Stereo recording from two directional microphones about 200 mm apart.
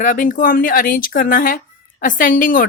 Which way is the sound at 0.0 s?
40° left (ahead or behind).